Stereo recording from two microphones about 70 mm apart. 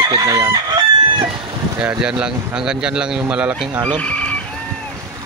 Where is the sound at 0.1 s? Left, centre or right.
Right.